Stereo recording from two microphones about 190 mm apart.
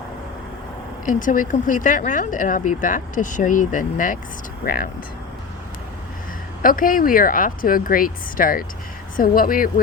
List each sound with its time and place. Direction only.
1.0 s speech: 45° left (ahead or behind)
6.6 s speech: 45° left (ahead or behind)